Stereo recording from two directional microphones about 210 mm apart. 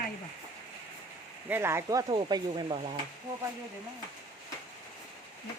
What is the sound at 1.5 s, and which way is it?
Speech, 10° right (ahead or behind).